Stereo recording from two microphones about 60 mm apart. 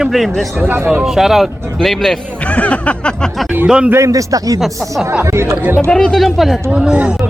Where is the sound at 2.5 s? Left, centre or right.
Left.